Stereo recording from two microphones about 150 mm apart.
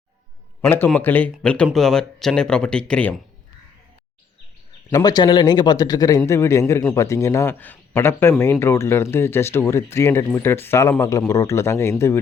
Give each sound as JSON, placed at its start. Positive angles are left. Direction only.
{"t": 0.9, "sound": "speech", "side_deg": 10}
{"t": 4.9, "sound": "speech", "side_deg": 25}